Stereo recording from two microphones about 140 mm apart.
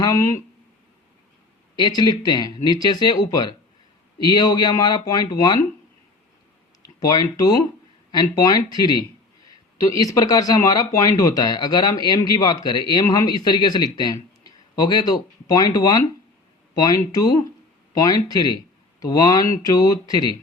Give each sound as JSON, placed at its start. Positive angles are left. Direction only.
{"t": 0.0, "sound": "speech", "side_deg": 25}
{"t": 1.7, "sound": "speech", "side_deg": 30}
{"t": 7.0, "sound": "speech", "side_deg": 25}